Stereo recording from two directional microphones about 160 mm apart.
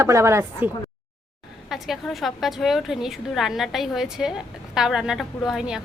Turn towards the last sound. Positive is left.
turn(degrees=-5)  # may be behind; listen again after turning